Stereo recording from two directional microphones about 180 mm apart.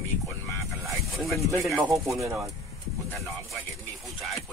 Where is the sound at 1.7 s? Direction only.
15° right (ahead or behind).